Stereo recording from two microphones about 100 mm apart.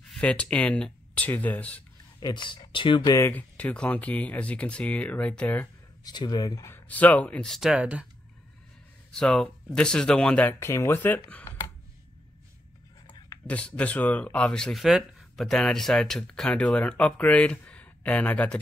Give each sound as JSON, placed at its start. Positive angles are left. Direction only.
{"t": 0.1, "sound": "speech", "side_deg": 10}
{"t": 2.1, "sound": "speech", "side_deg": 45}
{"t": 3.2, "sound": "speech", "side_deg": 20}
{"t": 6.0, "sound": "speech", "side_deg": 45}
{"t": 6.7, "sound": "speech", "side_deg": 15}
{"t": 7.7, "sound": "speech", "side_deg": -10}
{"t": 9.1, "sound": "speech", "side_deg": 10}
{"t": 10.6, "sound": "speech", "side_deg": 30}
{"t": 13.5, "sound": "speech", "side_deg": 15}